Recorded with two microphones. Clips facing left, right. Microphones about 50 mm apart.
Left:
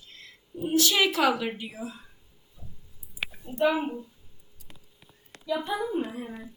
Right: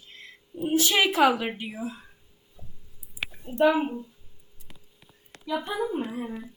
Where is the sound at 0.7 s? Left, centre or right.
Right.